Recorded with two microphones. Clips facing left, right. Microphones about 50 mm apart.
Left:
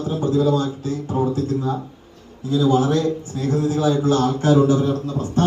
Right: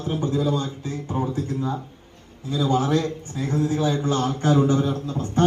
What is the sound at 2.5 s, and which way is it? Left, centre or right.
A man's voice, right.